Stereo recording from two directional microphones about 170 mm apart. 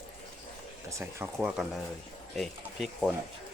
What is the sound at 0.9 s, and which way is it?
Speech, 15° right (ahead or behind).